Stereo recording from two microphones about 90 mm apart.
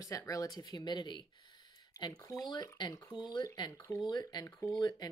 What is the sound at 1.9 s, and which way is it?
Speech, 45° left (ahead or behind).